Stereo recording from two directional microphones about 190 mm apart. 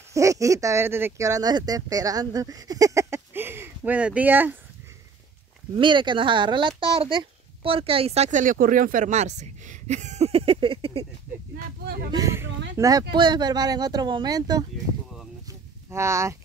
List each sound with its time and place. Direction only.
0.1 s speech: 15° right (ahead or behind)
5.8 s a child's voice: 25° right (ahead or behind)
11.5 s speech: 55° right (ahead or behind)
12.1 s speech: 15° right (ahead or behind)
15.9 s speech: 15° right (ahead or behind)